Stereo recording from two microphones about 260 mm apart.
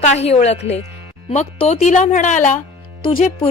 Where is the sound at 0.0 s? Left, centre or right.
Left.